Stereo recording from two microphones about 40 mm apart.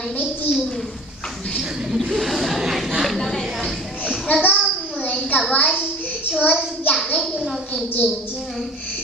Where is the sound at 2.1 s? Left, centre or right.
Centre.